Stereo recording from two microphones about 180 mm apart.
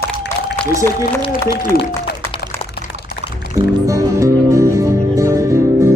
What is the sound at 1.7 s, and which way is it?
Speech, 55° left (ahead or behind).